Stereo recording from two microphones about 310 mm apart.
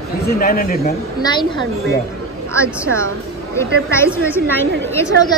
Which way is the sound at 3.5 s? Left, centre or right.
Centre.